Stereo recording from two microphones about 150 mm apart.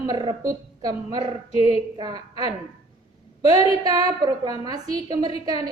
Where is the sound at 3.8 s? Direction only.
25° right (ahead or behind).